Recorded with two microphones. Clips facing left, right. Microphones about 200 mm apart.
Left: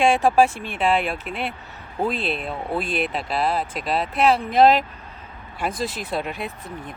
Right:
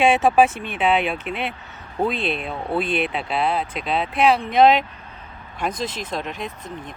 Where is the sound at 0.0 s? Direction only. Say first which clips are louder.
Right 1 dB; 5° right (ahead or behind).